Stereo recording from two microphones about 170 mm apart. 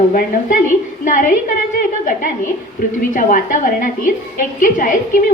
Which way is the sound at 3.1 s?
55° left (ahead or behind).